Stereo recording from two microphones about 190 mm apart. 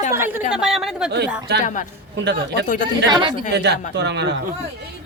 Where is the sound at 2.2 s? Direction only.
65° right (ahead or behind).